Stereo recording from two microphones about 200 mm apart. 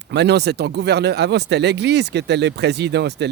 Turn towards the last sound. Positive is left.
turn(degrees=-60)  # may be behind; listen again after turning